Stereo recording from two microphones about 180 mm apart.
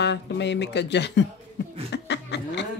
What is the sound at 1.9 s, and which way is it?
Chuckle, 75° left (ahead or behind).